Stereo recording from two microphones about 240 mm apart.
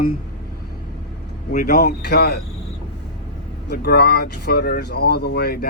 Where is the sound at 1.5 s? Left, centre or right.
Left.